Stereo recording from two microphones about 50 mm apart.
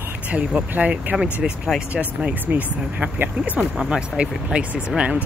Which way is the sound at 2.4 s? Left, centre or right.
Right.